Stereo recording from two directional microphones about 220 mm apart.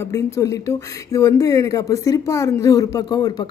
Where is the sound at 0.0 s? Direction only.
15° left (ahead or behind).